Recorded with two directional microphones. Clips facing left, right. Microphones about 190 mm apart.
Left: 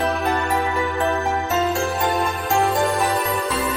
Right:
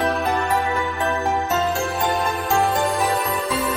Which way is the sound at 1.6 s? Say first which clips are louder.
Left 1 dB; centre (ahead or behind).